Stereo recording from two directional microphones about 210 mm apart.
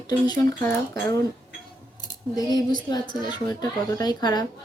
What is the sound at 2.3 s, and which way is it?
Speech, 20° left (ahead or behind).